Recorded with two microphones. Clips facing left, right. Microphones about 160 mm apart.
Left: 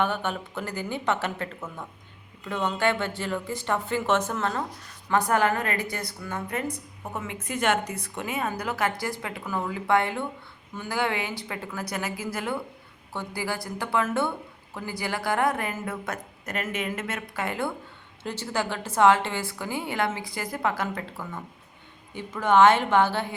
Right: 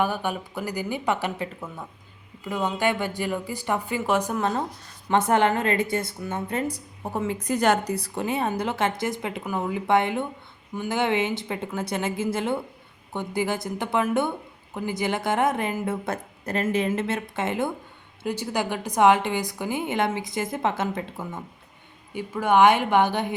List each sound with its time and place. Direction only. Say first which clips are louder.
0.0 s a woman's voice: right 1 dB; 10° right (ahead or behind)
22.1 s a woman's voice: right 1 dB; 10° right (ahead or behind)